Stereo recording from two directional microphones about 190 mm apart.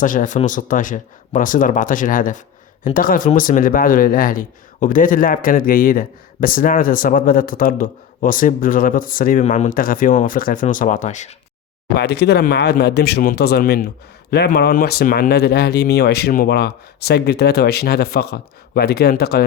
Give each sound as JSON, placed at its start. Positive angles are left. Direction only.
{"t": 0.0, "sound": "speech", "side_deg": 45}
{"t": 11.9, "sound": "speech", "side_deg": 60}